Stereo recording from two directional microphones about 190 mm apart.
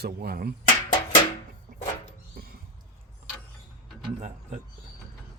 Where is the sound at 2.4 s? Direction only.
50° right (ahead or behind).